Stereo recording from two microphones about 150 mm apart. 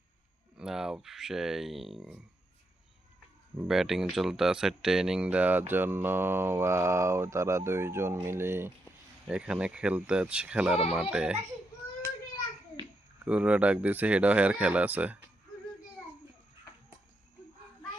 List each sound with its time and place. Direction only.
0.5 s speech: 5° right (ahead or behind)
3.7 s speech: centre (ahead or behind)
13.2 s speech: 10° right (ahead or behind)